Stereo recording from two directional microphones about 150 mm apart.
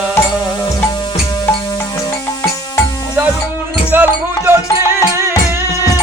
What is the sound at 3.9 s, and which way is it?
Music, 15° right (ahead or behind).